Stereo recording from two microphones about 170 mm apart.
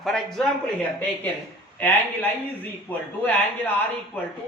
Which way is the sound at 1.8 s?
10° left (ahead or behind).